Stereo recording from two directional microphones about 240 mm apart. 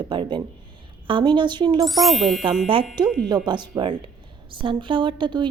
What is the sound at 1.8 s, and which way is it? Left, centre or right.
Speech, centre.